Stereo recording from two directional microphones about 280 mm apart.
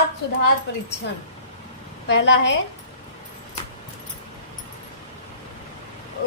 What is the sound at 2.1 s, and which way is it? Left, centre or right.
Speech, left.